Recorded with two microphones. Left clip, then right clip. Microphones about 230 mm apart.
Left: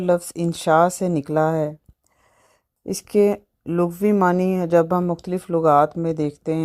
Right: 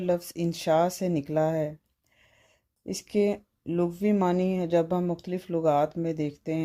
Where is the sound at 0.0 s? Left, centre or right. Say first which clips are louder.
Left 7 dB; left.